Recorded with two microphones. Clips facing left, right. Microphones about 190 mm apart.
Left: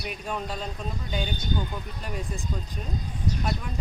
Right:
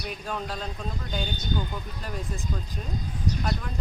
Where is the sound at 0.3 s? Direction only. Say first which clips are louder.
Left 1 dB; centre (ahead or behind).